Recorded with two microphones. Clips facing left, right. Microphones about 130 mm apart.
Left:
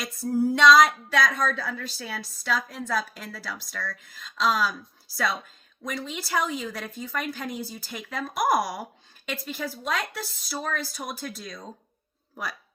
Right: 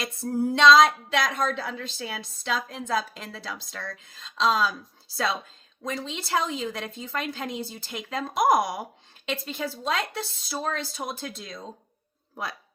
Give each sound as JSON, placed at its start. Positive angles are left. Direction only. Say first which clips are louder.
{"t": 0.0, "sound": "a woman's voice", "louder": "left 2 dB", "side_deg": -25}